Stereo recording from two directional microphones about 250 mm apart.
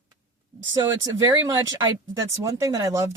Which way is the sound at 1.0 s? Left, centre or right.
Centre.